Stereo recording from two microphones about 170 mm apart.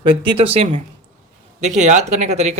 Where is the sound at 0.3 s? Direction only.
35° right (ahead or behind).